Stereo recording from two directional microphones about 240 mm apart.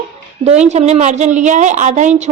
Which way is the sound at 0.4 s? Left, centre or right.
Right.